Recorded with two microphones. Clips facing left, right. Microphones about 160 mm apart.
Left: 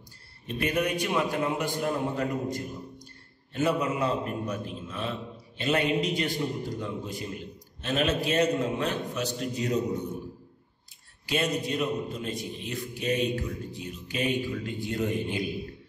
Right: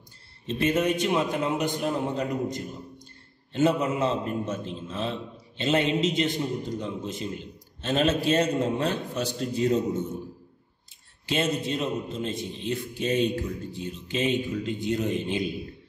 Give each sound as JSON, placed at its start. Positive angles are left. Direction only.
{"t": 0.5, "sound": "a man's voice", "side_deg": -25}
{"t": 11.2, "sound": "a man's voice", "side_deg": -25}